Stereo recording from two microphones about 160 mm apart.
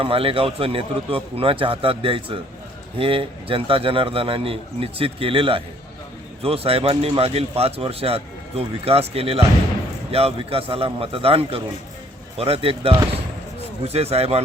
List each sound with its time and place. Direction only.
0.0 s speech: 35° right (ahead or behind)